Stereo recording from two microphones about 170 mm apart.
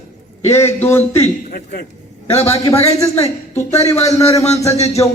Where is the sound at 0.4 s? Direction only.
15° left (ahead or behind).